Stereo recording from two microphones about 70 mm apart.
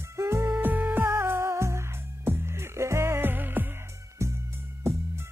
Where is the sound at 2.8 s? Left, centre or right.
Right.